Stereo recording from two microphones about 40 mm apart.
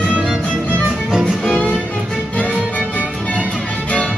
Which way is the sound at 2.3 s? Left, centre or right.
Left.